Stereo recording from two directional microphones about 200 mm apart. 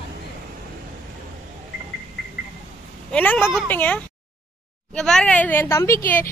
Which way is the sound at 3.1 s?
10° left (ahead or behind).